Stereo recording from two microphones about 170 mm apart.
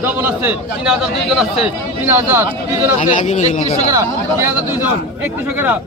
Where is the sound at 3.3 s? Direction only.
40° left (ahead or behind).